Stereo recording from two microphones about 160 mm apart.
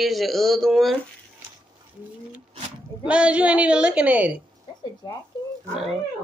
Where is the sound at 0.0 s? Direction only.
Centre (ahead or behind).